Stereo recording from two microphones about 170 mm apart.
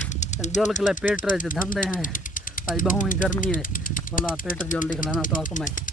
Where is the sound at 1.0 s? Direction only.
50° left (ahead or behind).